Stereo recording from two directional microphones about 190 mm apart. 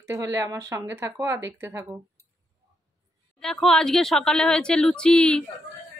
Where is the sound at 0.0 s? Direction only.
15° right (ahead or behind).